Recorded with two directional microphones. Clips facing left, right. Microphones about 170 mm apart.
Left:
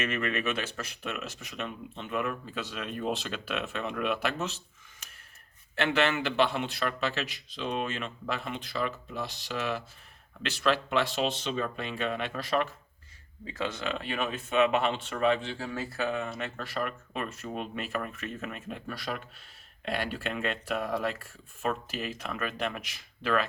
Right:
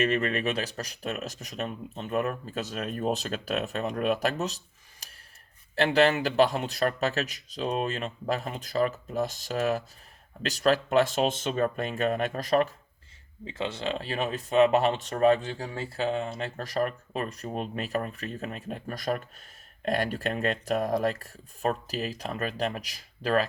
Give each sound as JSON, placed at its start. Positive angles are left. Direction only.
{"t": 0.0, "sound": "speech", "side_deg": -35}
{"t": 13.5, "sound": "speech", "side_deg": -25}
{"t": 15.7, "sound": "speech", "side_deg": -30}